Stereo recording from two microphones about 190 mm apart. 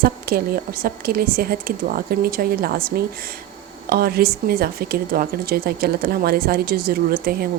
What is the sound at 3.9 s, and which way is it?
A woman's voice, 55° right (ahead or behind).